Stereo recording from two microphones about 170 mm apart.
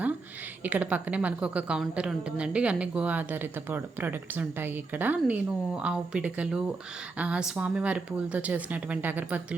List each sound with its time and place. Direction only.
0.6 s a woman's voice: 10° right (ahead or behind)